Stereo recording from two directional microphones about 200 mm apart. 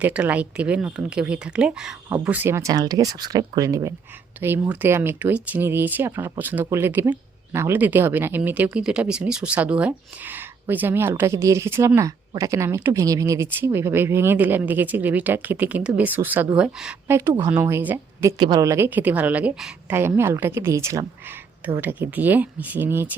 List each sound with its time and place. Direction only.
0.0 s speech: 5° right (ahead or behind)